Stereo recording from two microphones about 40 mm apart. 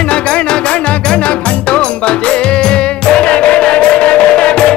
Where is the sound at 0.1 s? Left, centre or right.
Left.